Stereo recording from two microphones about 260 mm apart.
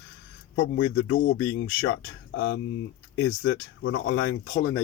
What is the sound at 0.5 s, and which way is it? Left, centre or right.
Speech, left.